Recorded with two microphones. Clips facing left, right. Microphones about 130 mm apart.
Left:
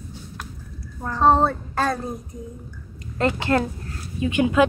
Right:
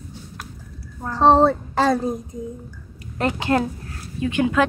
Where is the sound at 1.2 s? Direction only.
90° right.